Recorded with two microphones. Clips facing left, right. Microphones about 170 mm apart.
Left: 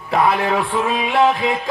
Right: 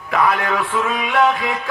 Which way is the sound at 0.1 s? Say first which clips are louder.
Left 2 dB; 30° left (ahead or behind).